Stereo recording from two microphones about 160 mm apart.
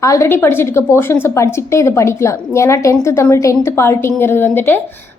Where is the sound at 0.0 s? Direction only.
20° left (ahead or behind).